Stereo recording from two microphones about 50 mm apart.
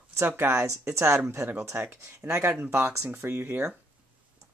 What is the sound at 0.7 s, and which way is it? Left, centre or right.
Speech, right.